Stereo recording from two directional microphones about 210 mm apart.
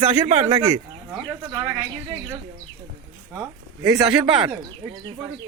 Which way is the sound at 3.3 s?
10° right (ahead or behind).